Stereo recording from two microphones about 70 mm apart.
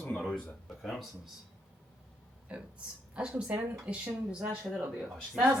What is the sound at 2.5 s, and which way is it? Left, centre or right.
Speech, centre.